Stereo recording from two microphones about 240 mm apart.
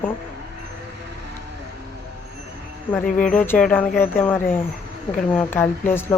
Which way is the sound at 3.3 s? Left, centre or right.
Centre.